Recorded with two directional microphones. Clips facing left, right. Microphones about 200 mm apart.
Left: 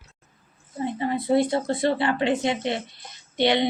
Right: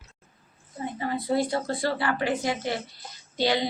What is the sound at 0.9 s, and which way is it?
A woman's voice, 25° left (ahead or behind).